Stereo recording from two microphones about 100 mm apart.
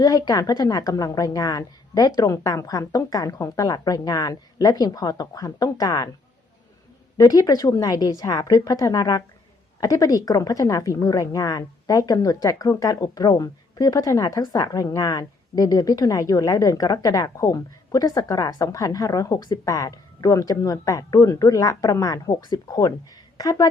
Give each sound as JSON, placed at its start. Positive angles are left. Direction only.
{"t": 0.0, "sound": "a woman's voice", "side_deg": 40}
{"t": 7.2, "sound": "a woman's voice", "side_deg": 40}